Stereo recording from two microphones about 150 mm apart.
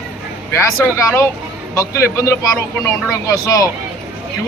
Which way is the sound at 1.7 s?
20° left (ahead or behind).